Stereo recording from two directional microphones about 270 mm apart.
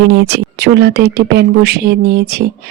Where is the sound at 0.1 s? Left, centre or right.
Right.